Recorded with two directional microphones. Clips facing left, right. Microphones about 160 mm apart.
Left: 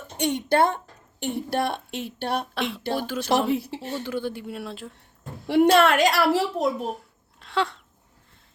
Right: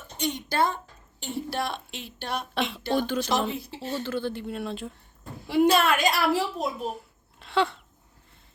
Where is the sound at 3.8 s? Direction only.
15° left (ahead or behind).